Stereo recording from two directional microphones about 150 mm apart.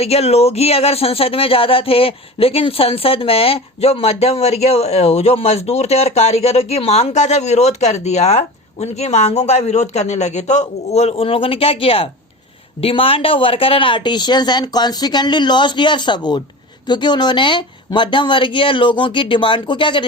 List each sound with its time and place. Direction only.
0.0 s speech: 45° left (ahead or behind)